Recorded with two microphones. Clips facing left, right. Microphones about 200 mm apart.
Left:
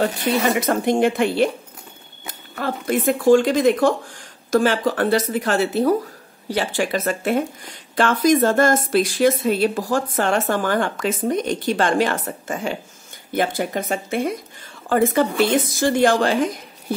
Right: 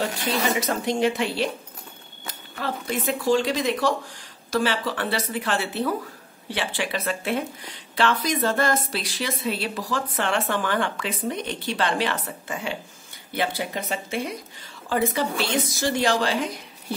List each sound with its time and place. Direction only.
0.3 s speech: 55° left (ahead or behind)